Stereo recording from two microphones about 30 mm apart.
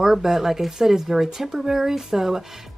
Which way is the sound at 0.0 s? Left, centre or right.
Centre.